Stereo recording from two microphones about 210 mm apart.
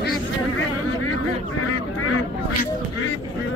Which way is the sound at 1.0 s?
90° left.